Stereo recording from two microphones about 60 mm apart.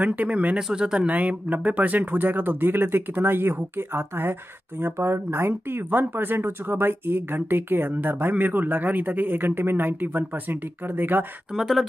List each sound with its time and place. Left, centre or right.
0.0 s speech: right
0.6 s speech: centre
1.1 s speech: right
11.5 s speech: centre